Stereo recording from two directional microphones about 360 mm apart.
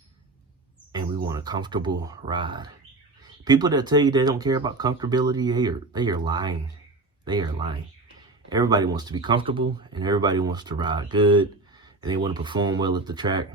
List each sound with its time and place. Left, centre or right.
0.9 s speech: centre